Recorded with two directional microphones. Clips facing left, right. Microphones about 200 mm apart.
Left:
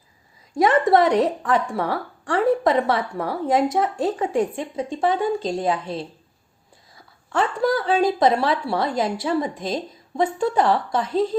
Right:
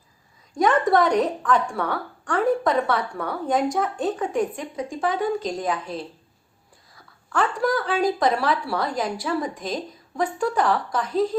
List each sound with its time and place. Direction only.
0.5 s a woman's voice: 25° left (ahead or behind)
7.3 s a woman's voice: 25° left (ahead or behind)